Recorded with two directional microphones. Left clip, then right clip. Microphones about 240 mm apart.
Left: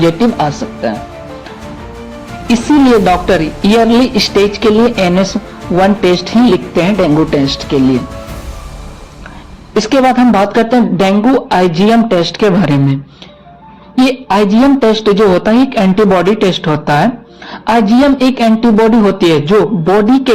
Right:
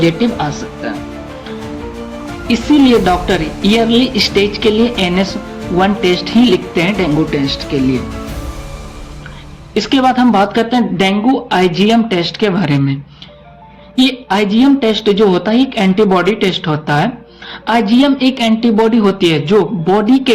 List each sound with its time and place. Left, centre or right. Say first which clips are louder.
2.5 s speech: left 2 dB; left
9.7 s speech: left 3 dB; left